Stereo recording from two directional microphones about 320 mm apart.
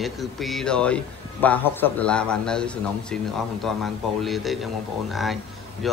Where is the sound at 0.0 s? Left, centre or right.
Centre.